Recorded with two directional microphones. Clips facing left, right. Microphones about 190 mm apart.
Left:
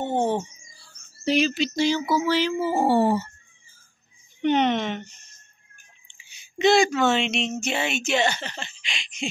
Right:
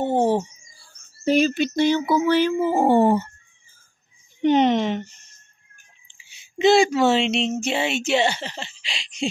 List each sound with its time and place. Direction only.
0.0 s bird: 35° right (ahead or behind)
0.7 s a sound: 50° right (ahead or behind)
4.4 s speech: 35° right (ahead or behind)
6.0 s speech: 25° right (ahead or behind)